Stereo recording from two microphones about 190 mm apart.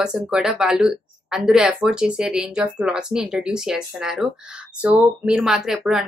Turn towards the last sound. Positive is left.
turn(degrees=0)  # may be behind; listen again after turning